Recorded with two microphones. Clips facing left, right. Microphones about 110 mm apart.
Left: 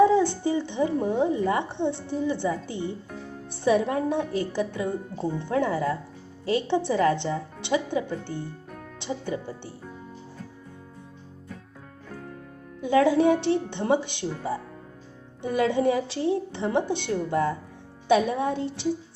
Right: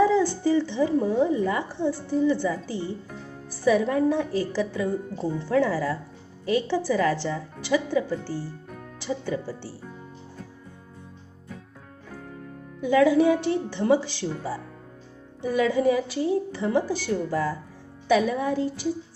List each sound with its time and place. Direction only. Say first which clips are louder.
0.0 s a woman's voice: left 1 dB; 20° left (ahead or behind)
12.8 s a woman's voice: right 1 dB; 25° left (ahead or behind)
14.3 s speech: left 1 dB; centre (ahead or behind)
15.4 s a woman's voice: right 1 dB; 25° left (ahead or behind)